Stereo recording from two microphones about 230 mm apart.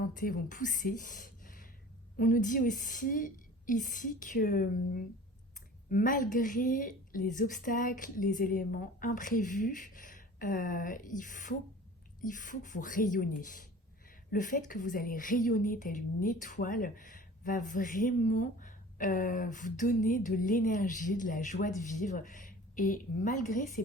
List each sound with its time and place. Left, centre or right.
0.1 s a woman's voice: left